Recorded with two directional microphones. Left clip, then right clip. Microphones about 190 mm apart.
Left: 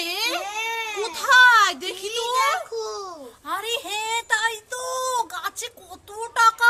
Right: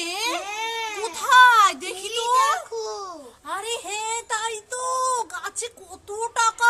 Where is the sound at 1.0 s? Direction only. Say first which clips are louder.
Even; 5° right (ahead or behind).